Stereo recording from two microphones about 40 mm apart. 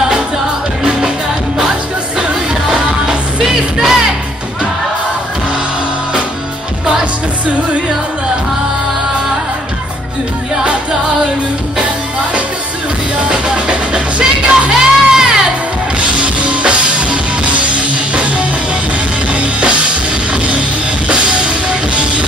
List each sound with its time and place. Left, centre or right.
2.1 s music: right
10.5 s music: right
13.3 s music: right
16.0 s music: right
21.6 s music: right